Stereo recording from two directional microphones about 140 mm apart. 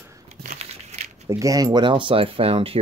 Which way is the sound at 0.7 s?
50° right (ahead or behind).